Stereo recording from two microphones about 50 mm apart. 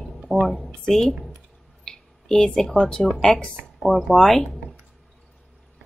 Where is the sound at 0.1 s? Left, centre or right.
Centre.